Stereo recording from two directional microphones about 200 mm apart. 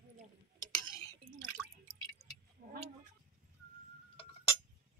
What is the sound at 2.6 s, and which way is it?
Vehicle, 45° right (ahead or behind).